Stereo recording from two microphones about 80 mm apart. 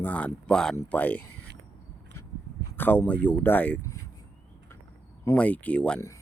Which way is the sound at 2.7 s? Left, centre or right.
Left.